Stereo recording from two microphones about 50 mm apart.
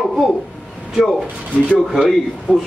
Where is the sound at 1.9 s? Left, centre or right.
Centre.